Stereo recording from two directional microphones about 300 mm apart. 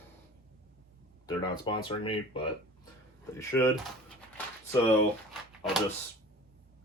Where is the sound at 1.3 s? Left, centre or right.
Centre.